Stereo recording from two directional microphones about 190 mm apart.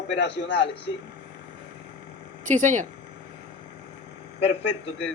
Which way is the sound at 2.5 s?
40° right (ahead or behind).